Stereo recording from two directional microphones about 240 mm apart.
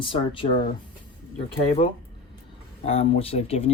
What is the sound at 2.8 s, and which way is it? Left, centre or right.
Speech, left.